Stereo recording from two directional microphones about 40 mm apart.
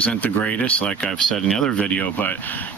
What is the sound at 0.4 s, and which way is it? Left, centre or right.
Speech, left.